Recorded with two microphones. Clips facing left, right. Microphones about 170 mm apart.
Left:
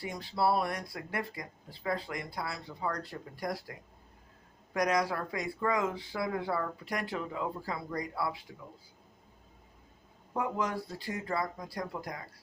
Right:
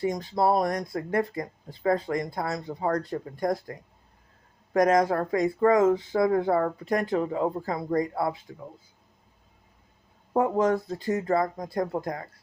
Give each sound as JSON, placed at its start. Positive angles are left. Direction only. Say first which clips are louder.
{"t": 0.0, "sound": "speech", "louder": "right 6 dB", "side_deg": -45}
{"t": 10.3, "sound": "speech", "louder": "right 10 dB", "side_deg": -45}